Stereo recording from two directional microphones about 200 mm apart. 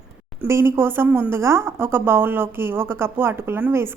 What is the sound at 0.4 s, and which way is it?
A woman's voice, 15° right (ahead or behind).